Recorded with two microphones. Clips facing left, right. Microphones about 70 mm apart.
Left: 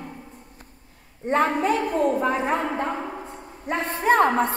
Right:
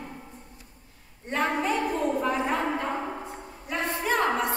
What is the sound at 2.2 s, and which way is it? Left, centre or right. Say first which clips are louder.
A woman's voice: left 3 dB; left.